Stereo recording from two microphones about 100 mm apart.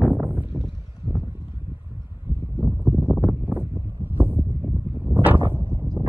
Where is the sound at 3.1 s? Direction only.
20° right (ahead or behind).